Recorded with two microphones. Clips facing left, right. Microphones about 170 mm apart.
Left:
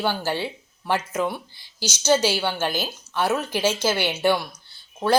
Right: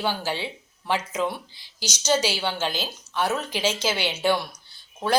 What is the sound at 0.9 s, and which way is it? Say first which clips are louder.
Speech: left 1 dB; 5° left (ahead or behind).